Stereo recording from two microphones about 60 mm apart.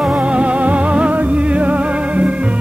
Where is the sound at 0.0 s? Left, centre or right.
Centre.